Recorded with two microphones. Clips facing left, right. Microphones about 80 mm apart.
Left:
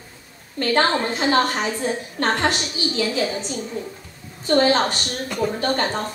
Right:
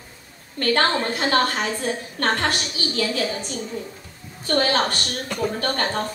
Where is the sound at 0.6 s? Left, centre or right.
Centre.